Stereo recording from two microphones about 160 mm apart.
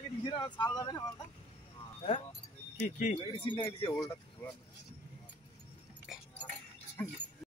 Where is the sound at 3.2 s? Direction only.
30° left (ahead or behind).